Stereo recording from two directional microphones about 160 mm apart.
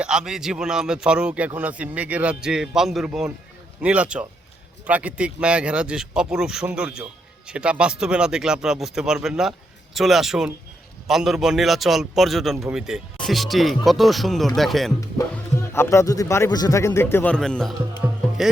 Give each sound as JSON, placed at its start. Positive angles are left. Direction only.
{"t": 0.0, "sound": "speech", "side_deg": -5}
{"t": 15.5, "sound": "a man's voice", "side_deg": 15}
{"t": 17.3, "sound": "speech", "side_deg": 5}